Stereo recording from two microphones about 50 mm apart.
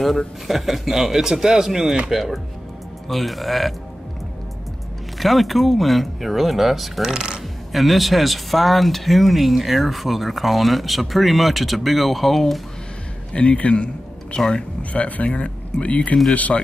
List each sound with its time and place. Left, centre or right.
0.5 s speech: centre
5.2 s speech: centre
13.3 s a man's voice: left
14.3 s speech: centre
14.8 s speech: left